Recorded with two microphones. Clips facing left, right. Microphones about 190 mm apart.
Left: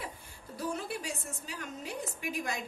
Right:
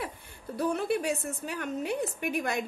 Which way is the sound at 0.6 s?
60° right (ahead or behind).